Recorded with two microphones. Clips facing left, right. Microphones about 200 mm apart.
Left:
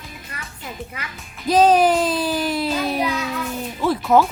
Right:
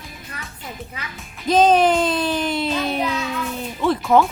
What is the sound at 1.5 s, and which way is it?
A child's voice, 5° left (ahead or behind).